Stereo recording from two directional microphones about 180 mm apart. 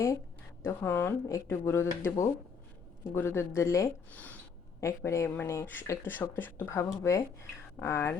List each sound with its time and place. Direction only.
0.6 s speech: 10° left (ahead or behind)